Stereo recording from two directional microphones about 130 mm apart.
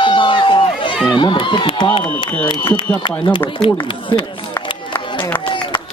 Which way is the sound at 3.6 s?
40° left (ahead or behind).